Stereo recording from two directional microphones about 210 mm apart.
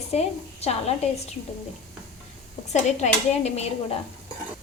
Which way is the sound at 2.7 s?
35° left (ahead or behind).